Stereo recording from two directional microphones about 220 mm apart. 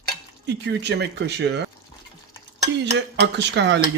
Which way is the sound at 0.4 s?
50° right (ahead or behind).